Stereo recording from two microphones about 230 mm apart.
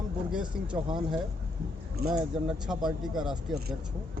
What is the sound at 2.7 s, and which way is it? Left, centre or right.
Speech, centre.